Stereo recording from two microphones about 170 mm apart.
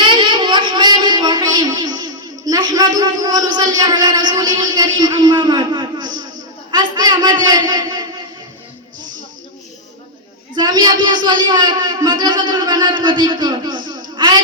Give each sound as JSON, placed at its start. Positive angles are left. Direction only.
{"t": 0.0, "sound": "a sound", "side_deg": -30}
{"t": 6.7, "sound": "a man's voice", "side_deg": -25}
{"t": 10.5, "sound": "a man's voice", "side_deg": -25}